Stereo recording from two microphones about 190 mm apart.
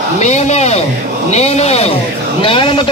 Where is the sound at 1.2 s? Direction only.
35° left (ahead or behind).